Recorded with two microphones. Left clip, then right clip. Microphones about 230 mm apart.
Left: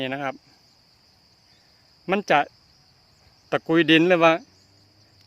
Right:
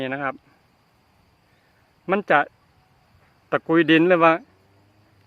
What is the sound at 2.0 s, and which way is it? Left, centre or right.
Speech, left.